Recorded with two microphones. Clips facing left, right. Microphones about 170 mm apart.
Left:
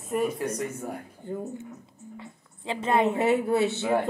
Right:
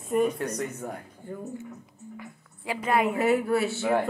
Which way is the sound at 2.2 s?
25° left (ahead or behind).